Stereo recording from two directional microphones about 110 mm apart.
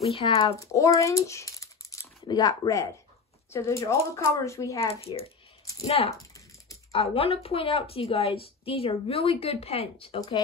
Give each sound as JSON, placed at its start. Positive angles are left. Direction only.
{"t": 0.0, "sound": "a woman's voice", "side_deg": 65}
{"t": 0.5, "sound": "speech", "side_deg": 30}
{"t": 4.7, "sound": "a woman's voice", "side_deg": 65}